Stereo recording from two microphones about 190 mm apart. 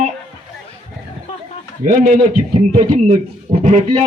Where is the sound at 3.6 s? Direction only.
35° right (ahead or behind).